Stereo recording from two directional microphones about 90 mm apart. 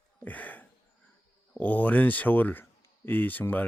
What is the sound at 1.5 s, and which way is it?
Speech, 20° left (ahead or behind).